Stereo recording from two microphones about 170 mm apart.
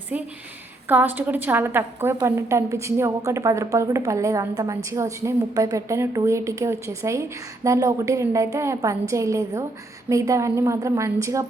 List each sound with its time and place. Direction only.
0.1 s a woman's voice: 10° right (ahead or behind)